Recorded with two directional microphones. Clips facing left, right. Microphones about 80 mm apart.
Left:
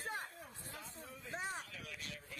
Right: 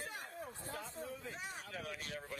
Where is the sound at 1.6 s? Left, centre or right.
Right.